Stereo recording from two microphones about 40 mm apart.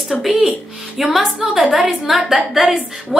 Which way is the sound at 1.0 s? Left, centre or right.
Centre.